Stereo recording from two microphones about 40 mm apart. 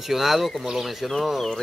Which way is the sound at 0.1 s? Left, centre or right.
Centre.